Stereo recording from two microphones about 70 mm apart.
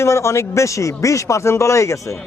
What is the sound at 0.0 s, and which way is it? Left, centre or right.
Speech, left.